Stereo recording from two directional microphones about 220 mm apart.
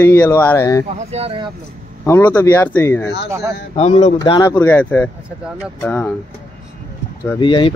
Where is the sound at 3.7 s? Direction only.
30° left (ahead or behind).